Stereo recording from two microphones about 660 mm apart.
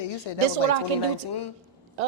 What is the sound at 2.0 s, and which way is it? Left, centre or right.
Speech, right.